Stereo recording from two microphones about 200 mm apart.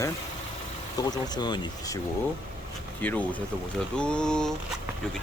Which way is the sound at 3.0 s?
10° left (ahead or behind).